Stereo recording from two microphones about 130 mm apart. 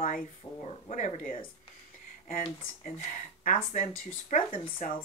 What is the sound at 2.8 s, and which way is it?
Speech, 75° left (ahead or behind).